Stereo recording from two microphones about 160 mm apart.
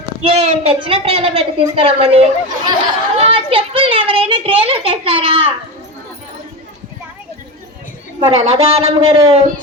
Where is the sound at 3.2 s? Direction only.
35° right (ahead or behind).